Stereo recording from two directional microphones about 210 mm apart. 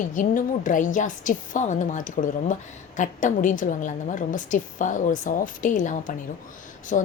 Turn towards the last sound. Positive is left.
turn(degrees=35)  # may be behind; listen again after turning